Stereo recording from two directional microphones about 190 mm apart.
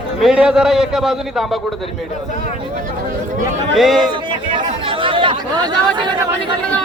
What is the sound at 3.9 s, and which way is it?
Speech, 25° right (ahead or behind).